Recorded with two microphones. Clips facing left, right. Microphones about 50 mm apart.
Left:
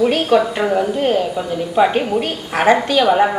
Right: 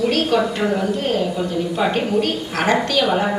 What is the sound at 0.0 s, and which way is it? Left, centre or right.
A woman's voice, centre.